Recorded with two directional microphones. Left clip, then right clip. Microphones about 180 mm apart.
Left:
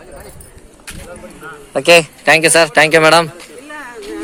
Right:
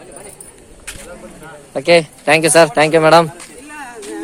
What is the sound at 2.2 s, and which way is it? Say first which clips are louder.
A man's voice: even; 5° left (ahead or behind).